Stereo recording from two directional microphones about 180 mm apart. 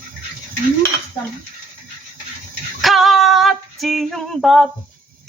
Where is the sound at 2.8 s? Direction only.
Centre (ahead or behind).